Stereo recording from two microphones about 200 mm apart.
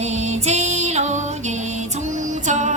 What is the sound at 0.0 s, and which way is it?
Music, 35° right (ahead or behind).